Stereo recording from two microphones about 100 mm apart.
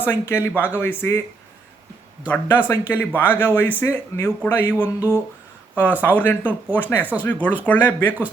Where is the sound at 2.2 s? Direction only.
20° left (ahead or behind).